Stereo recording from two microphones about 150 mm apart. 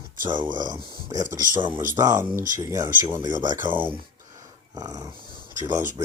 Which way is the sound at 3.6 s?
15° right (ahead or behind).